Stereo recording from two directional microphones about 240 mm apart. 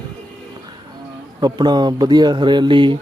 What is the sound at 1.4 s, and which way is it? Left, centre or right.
Speech, centre.